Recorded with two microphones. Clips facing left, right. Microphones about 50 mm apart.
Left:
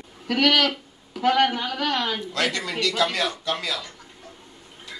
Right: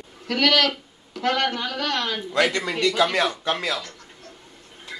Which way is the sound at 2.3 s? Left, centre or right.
Right.